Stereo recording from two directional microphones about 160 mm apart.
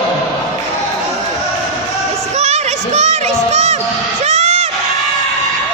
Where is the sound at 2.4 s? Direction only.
45° right (ahead or behind).